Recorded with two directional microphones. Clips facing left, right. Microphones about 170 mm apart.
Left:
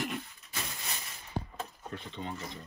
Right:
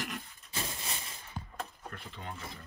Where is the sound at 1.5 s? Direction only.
5° right (ahead or behind).